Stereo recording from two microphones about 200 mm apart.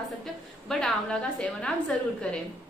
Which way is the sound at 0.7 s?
5° left (ahead or behind).